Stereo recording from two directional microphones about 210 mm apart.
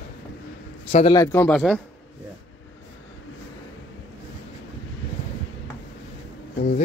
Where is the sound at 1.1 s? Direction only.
10° left (ahead or behind).